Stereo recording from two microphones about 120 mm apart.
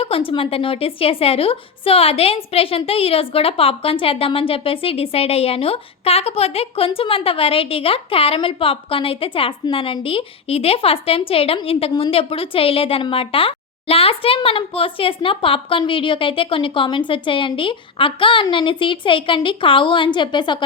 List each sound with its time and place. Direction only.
0.0 s a woman's voice: 50° left (ahead or behind)